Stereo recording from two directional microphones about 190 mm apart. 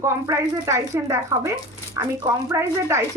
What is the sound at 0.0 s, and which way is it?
Speech, 15° right (ahead or behind).